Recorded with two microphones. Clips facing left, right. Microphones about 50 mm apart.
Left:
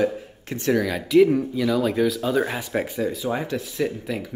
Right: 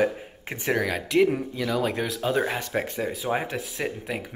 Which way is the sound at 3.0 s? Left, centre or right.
Centre.